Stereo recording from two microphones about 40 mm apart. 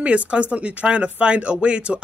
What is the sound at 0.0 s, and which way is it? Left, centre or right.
Speech, right.